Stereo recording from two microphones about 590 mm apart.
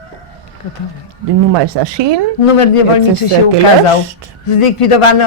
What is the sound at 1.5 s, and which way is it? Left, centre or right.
Speech, right.